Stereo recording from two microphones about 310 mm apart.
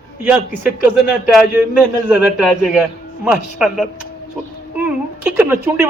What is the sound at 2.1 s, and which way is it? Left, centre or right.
A man's voice, centre.